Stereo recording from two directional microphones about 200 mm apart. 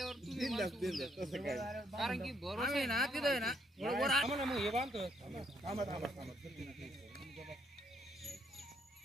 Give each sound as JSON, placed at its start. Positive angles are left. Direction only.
{"t": 0.0, "sound": "speech", "side_deg": 0}
{"t": 5.2, "sound": "speech", "side_deg": -25}
{"t": 6.2, "sound": "music", "side_deg": 0}